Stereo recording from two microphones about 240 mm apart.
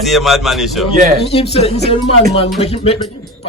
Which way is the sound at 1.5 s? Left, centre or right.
Left.